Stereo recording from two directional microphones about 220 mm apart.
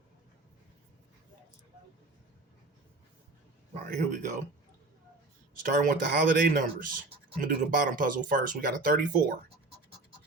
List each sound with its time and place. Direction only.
3.8 s speech: 35° right (ahead or behind)
5.9 s speech: 40° right (ahead or behind)